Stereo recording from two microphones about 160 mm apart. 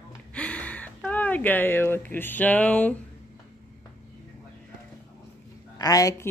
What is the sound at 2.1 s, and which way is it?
Speech, 10° left (ahead or behind).